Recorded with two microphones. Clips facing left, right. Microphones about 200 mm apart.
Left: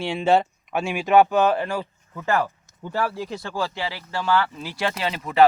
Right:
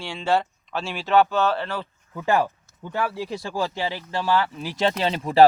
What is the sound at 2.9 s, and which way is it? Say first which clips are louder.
Speech: even; centre (ahead or behind).